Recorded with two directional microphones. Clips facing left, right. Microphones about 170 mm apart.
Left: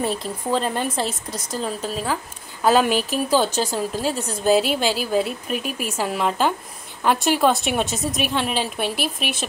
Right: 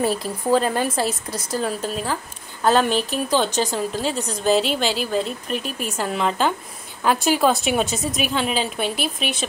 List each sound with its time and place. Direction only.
0.0 s a woman's voice: 5° right (ahead or behind)